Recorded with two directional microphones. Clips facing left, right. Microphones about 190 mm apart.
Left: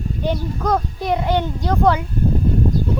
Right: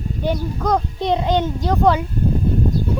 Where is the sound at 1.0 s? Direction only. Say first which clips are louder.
Right 1 dB; 20° right (ahead or behind).